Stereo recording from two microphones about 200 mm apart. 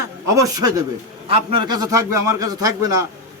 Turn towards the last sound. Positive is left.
turn(degrees=-15)  # may be behind; listen again after turning